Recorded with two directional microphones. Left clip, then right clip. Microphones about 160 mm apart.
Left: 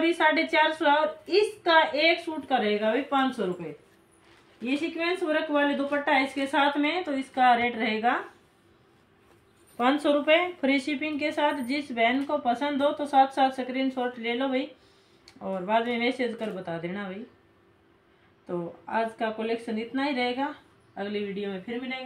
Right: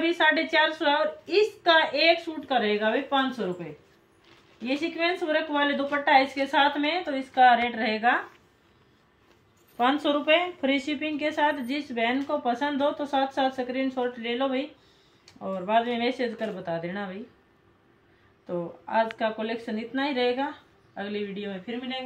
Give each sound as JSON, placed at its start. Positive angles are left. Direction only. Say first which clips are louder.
{"t": 0.0, "sound": "a woman's voice", "louder": "even", "side_deg": -10}
{"t": 4.6, "sound": "a woman's voice", "louder": "right 2 dB", "side_deg": -30}
{"t": 9.8, "sound": "a woman's voice", "louder": "even", "side_deg": 0}
{"t": 18.5, "sound": "a woman's voice", "louder": "right 2 dB", "side_deg": -20}